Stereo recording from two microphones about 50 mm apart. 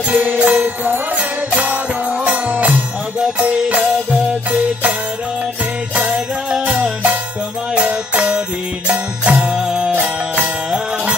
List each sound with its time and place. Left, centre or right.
0.1 s music: right
5.9 s jingle bell: centre
6.6 s music: right